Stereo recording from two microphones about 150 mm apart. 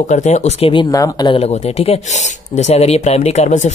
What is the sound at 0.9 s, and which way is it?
Speech, 25° left (ahead or behind).